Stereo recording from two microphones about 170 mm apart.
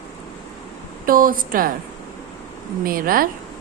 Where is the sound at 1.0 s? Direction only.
55° right (ahead or behind).